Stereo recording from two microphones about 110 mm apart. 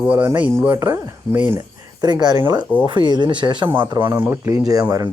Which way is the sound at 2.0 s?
40° right (ahead or behind).